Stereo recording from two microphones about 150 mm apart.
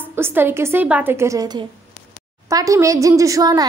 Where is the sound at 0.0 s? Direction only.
15° right (ahead or behind).